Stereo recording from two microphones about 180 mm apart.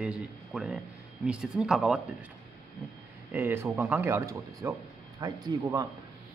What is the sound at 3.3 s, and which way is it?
Speech, 15° right (ahead or behind).